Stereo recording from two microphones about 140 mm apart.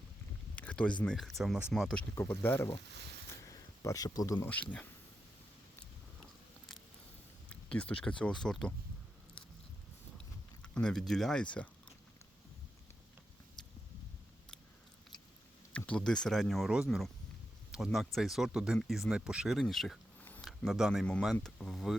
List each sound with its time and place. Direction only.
0.5 s a sound: 10° left (ahead or behind)
1.0 s speech: centre (ahead or behind)
2.1 s speech: 15° left (ahead or behind)
3.4 s a sound: 25° left (ahead or behind)
4.4 s speech: 10° left (ahead or behind)
7.5 s speech: 10° left (ahead or behind)
10.6 s speech: 5° left (ahead or behind)
15.7 s speech: 10° left (ahead or behind)